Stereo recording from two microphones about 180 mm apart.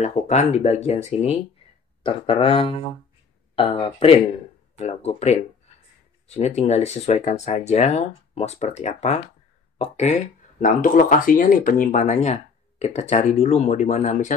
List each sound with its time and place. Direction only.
0.0 s speech: 40° left (ahead or behind)
10.6 s speech: 50° left (ahead or behind)